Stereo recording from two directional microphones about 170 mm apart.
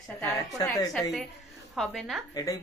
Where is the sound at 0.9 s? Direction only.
Centre (ahead or behind).